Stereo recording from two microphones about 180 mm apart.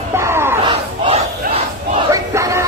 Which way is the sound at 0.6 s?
30° right (ahead or behind).